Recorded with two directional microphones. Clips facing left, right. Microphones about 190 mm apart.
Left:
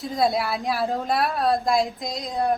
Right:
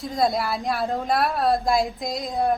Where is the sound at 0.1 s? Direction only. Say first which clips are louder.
Even; centre (ahead or behind).